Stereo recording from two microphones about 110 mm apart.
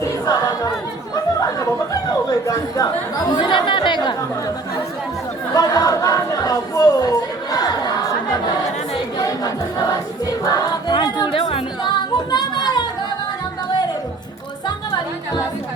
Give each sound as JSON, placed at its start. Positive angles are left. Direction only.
{"t": 0.0, "sound": "choir", "side_deg": 35}
{"t": 1.1, "sound": "speech", "side_deg": 35}
{"t": 5.5, "sound": "speech", "side_deg": 35}
{"t": 9.1, "sound": "choir", "side_deg": 35}
{"t": 10.4, "sound": "music", "side_deg": 35}